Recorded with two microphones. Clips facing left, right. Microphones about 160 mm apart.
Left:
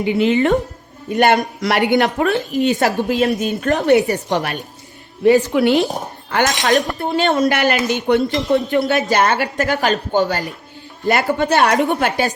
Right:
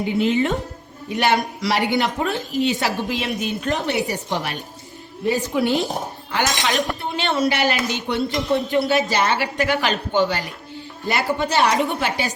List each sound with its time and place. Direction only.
0.0 s a woman's voice: 75° left (ahead or behind)
1.1 s speech: 50° left (ahead or behind); by 2.4 s 65° left (ahead or behind)
2.6 s speech: 45° left (ahead or behind)
3.9 s a woman's voice: 65° left (ahead or behind)
6.3 s speech: 50° left (ahead or behind)